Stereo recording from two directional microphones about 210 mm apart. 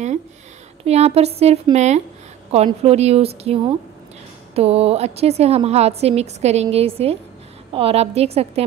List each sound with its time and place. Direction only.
0.8 s a woman's voice: 30° right (ahead or behind)